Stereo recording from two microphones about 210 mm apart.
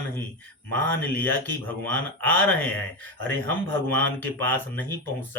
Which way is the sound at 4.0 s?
10° left (ahead or behind).